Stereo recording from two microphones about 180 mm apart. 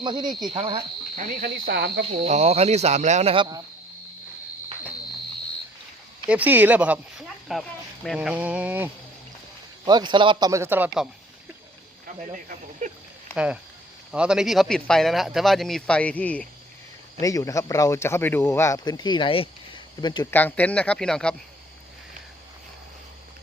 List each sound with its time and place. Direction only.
0.0 s speech: 25° right (ahead or behind)
1.4 s speech: 65° right (ahead or behind)
2.0 s speech: 35° right (ahead or behind)
6.2 s speech: 10° right (ahead or behind)
9.8 s speech: 25° right (ahead or behind); by 11.1 s 5° right (ahead or behind)
12.0 s speech: 45° right (ahead or behind)
13.3 s a man's voice: 5° right (ahead or behind)
17.2 s speech: 20° left (ahead or behind)
20.3 s speech: 10° left (ahead or behind)